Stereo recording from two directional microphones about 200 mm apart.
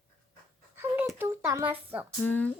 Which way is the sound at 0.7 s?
10° right (ahead or behind).